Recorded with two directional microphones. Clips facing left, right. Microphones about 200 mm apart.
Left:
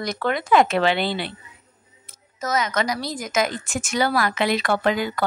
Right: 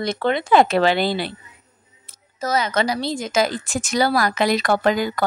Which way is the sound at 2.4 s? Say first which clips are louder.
Right 3 dB; 30° right (ahead or behind).